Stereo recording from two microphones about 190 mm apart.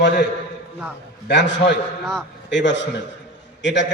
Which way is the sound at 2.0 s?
Centre (ahead or behind).